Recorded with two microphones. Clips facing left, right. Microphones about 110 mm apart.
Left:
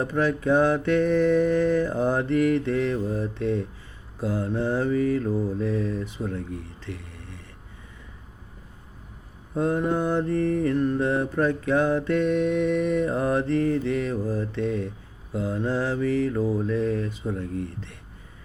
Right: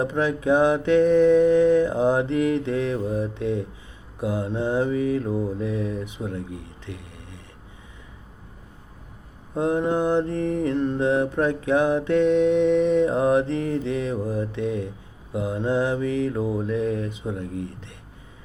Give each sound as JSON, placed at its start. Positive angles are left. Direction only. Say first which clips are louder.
{"t": 0.0, "sound": "mantra", "louder": "right 1 dB", "side_deg": -20}
{"t": 6.8, "sound": "a sound", "louder": "even", "side_deg": -15}
{"t": 9.6, "sound": "mantra", "louder": "right 2 dB", "side_deg": -20}